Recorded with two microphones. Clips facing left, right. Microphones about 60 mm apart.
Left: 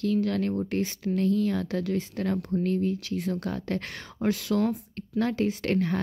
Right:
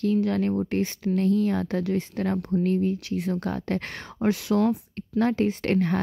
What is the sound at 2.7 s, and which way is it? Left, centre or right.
Speech, right.